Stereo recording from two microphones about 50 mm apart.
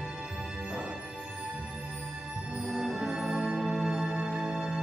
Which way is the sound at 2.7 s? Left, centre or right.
Centre.